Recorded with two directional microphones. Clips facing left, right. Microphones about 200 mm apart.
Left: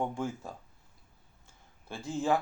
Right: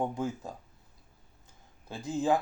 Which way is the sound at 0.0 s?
15° right (ahead or behind).